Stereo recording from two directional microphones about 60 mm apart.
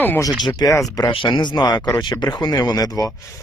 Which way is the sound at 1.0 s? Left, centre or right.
Left.